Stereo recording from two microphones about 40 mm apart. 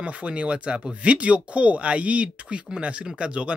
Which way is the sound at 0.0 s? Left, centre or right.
Right.